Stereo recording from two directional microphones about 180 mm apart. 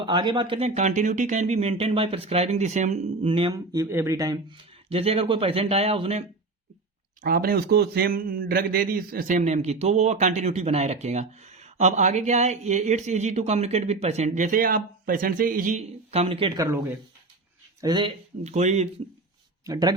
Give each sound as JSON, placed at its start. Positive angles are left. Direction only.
{"t": 0.0, "sound": "a man's voice", "side_deg": -25}
{"t": 7.2, "sound": "a man's voice", "side_deg": -55}
{"t": 16.6, "sound": "speech", "side_deg": -20}
{"t": 18.4, "sound": "a man's voice", "side_deg": -40}
{"t": 19.6, "sound": "speech", "side_deg": -20}